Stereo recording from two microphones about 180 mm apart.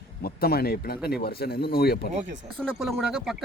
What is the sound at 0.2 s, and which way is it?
Speech, 55° left (ahead or behind).